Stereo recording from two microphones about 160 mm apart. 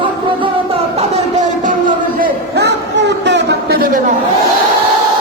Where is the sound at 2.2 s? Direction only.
90° right.